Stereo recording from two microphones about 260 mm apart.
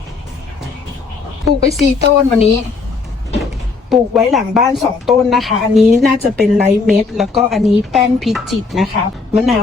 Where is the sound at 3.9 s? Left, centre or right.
Centre.